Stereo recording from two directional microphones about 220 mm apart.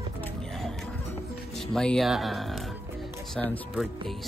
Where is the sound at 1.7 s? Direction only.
5° left (ahead or behind).